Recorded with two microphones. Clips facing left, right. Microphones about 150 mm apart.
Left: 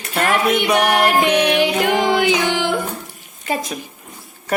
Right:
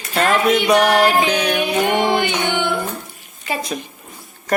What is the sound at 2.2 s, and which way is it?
Music, 90° left.